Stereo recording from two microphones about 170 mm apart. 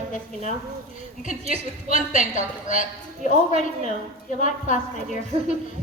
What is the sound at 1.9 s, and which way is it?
A woman's voice, 45° left (ahead or behind).